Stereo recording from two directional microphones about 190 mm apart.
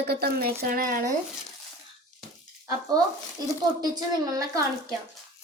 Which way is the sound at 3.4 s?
20° right (ahead or behind).